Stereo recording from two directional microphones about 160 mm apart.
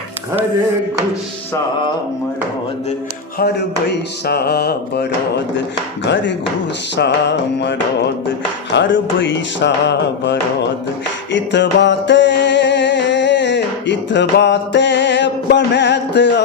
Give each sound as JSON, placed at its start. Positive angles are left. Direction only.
{"t": 4.3, "sound": "mantra", "side_deg": 80}
{"t": 6.9, "sound": "mantra", "side_deg": 90}
{"t": 11.5, "sound": "music", "side_deg": 90}